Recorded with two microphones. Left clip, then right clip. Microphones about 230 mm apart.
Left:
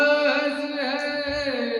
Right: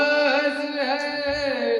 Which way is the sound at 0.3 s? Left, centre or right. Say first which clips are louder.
Right 1 dB; centre.